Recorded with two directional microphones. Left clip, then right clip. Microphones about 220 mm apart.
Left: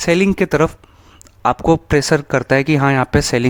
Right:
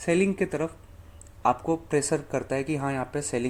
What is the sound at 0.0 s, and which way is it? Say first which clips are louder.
Speech: left 10 dB; 45° left (ahead or behind).